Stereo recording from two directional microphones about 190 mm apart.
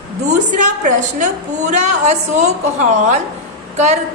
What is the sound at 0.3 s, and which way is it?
A woman's voice, 40° right (ahead or behind).